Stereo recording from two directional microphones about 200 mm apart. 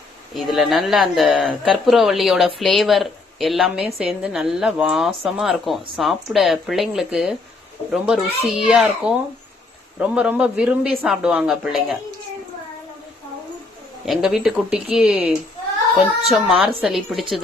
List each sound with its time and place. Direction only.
0.3 s a woman's voice: centre (ahead or behind)
14.0 s a woman's voice: centre (ahead or behind)